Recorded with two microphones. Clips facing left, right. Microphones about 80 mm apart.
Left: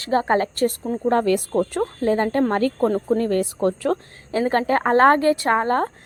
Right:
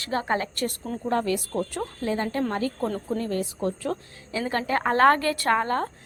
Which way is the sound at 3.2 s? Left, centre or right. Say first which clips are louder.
Left 7 dB; left.